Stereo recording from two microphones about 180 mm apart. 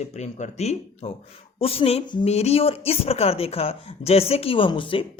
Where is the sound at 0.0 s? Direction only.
40° left (ahead or behind).